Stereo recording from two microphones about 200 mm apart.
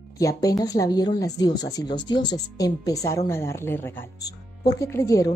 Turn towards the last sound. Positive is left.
turn(degrees=15)  # may be behind; listen again after turning